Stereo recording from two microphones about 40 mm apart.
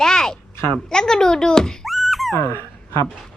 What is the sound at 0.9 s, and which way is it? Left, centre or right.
Child singing, centre.